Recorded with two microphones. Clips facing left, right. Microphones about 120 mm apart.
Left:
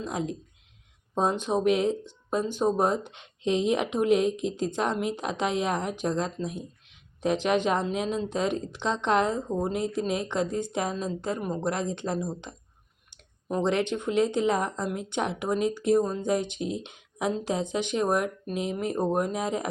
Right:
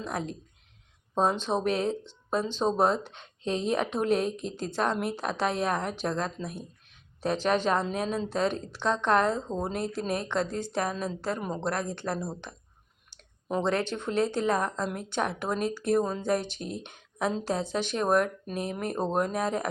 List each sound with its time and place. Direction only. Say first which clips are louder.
0.0 s a woman's voice: left 2 dB; 15° left (ahead or behind)
1.4 s a woman's voice: left 3 dB; 15° left (ahead or behind)
11.3 s a woman's voice: left 2 dB; 5° left (ahead or behind)
11.6 s speech: left 2 dB; 20° left (ahead or behind)
13.7 s a woman's voice: left 4 dB; 15° left (ahead or behind)
18.7 s speech: left 3 dB; 60° right (ahead or behind)
19.0 s a woman's voice: right 1 dB; 15° left (ahead or behind)